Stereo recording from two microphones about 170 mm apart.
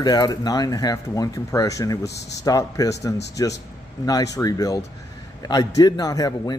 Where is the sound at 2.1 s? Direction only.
90° left.